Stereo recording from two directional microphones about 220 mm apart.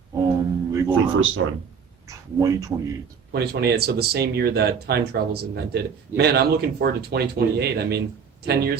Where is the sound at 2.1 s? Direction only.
15° right (ahead or behind).